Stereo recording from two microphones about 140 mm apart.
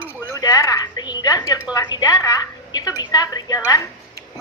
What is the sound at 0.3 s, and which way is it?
A woman's voice, 25° left (ahead or behind).